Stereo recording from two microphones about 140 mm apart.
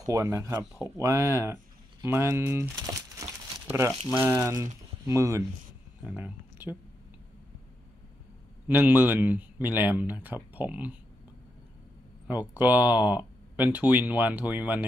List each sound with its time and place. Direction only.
0.0 s a man's voice: 25° right (ahead or behind)
8.6 s a man's voice: 15° right (ahead or behind)
12.3 s a man's voice: 10° right (ahead or behind)